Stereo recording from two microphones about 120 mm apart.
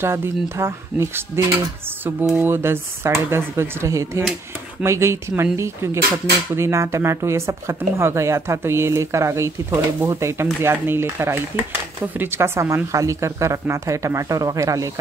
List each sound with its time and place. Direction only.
0.0 s speech: 20° right (ahead or behind)